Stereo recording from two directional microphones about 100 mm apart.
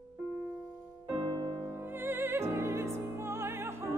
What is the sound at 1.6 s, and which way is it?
Music, 20° right (ahead or behind).